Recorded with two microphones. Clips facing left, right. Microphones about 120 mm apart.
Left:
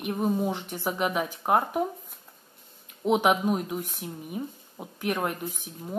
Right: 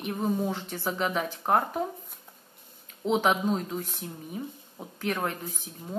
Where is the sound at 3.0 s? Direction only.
15° left (ahead or behind).